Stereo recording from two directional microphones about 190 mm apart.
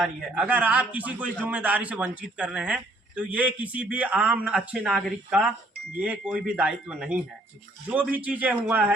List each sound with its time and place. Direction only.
0.0 s speech: 5° right (ahead or behind)